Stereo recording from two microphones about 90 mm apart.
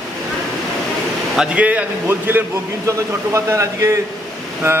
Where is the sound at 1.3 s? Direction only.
10° right (ahead or behind).